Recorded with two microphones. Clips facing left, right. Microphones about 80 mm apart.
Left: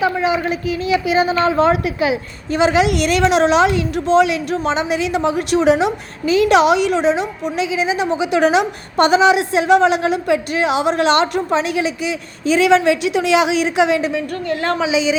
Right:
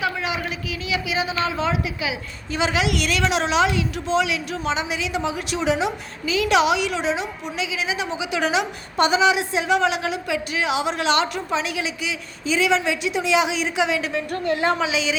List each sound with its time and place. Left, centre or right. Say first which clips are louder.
0.0 s a woman's voice: left 8 dB; left
12.5 s a woman's voice: left 8 dB; left
14.8 s a woman's voice: left 6 dB; centre